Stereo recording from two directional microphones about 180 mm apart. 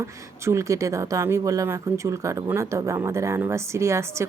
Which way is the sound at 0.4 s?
15° right (ahead or behind).